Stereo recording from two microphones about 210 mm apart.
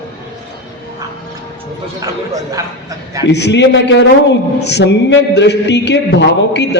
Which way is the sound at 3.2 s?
55° left (ahead or behind).